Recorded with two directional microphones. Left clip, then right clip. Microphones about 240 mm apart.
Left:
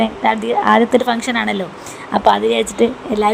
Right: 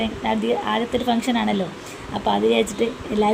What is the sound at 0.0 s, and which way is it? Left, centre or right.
A woman's voice, left.